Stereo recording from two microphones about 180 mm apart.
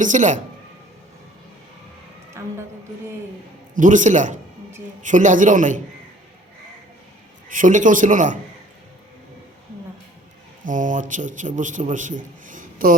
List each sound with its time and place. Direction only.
0.0 s a man's voice: 45° right (ahead or behind)
2.4 s music: 15° right (ahead or behind)
3.8 s a man's voice: 45° right (ahead or behind)
7.5 s a man's voice: 45° right (ahead or behind)
10.7 s a man's voice: 45° right (ahead or behind)